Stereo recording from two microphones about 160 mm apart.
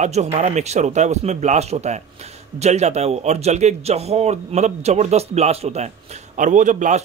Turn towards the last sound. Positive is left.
turn(degrees=-50)  # may be behind; listen again after turning